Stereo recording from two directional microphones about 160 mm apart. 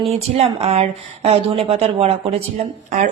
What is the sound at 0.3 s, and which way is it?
A woman's voice, 40° right (ahead or behind).